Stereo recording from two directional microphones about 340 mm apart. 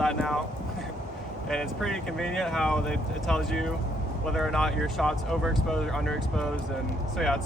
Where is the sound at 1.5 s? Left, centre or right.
Centre.